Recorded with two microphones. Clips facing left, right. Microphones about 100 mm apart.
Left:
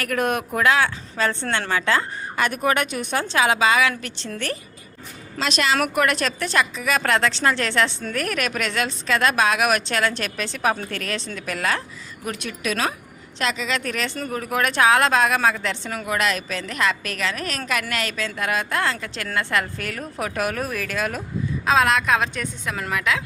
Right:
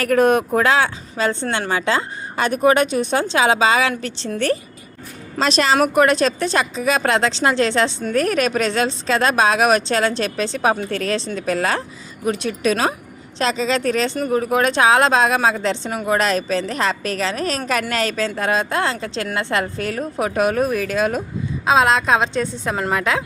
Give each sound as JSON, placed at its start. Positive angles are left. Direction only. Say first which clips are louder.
{"t": 0.0, "sound": "speech", "louder": "right 8 dB", "side_deg": -30}
{"t": 1.1, "sound": "speech", "louder": "right 5 dB", "side_deg": -15}
{"t": 5.4, "sound": "speech", "louder": "right 5 dB", "side_deg": -35}
{"t": 16.0, "sound": "speech", "louder": "right 6 dB", "side_deg": -35}